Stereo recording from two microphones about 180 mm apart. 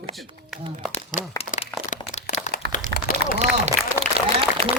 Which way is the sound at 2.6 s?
65° right (ahead or behind).